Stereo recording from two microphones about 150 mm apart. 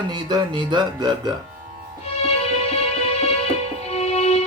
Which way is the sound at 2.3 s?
45° left (ahead or behind).